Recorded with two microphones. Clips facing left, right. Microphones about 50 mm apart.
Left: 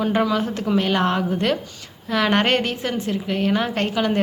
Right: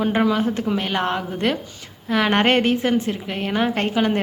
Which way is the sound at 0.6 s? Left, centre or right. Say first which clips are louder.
Left 2 dB; centre.